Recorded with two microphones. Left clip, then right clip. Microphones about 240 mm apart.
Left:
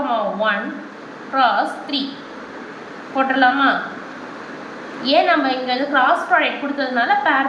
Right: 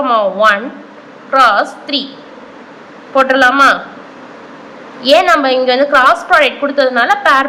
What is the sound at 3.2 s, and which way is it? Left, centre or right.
Speech, centre.